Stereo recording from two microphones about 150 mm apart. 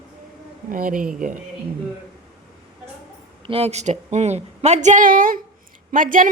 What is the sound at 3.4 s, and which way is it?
A woman's voice, 40° right (ahead or behind).